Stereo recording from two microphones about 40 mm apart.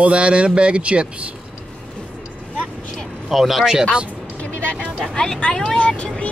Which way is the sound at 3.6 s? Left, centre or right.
Centre.